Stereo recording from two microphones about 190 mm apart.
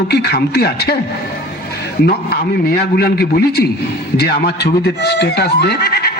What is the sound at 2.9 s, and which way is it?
Speech, 55° left (ahead or behind).